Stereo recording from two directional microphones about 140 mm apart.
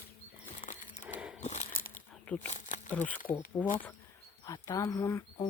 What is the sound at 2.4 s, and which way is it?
Insect, 60° left (ahead or behind).